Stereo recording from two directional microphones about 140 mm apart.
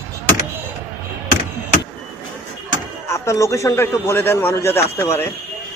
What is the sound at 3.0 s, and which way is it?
A man's voice, 20° left (ahead or behind).